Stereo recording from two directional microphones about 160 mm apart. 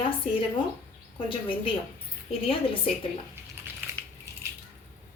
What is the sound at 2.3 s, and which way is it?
Speech, 35° left (ahead or behind).